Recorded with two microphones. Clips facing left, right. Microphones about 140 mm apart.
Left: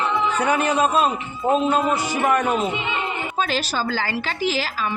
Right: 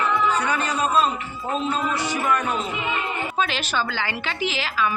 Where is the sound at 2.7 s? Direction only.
25° left (ahead or behind).